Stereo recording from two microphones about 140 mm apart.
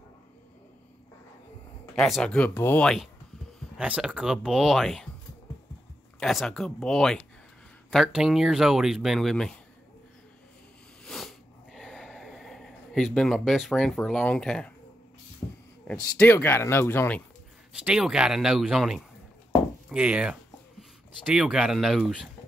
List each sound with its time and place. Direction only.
2.0 s speech: centre (ahead or behind)
3.7 s speech: 10° right (ahead or behind)
6.1 s speech: 5° left (ahead or behind)
11.1 s a sound: centre (ahead or behind)
15.4 s a sound: 30° left (ahead or behind)
15.9 s speech: 10° left (ahead or behind)
17.7 s speech: 5° right (ahead or behind)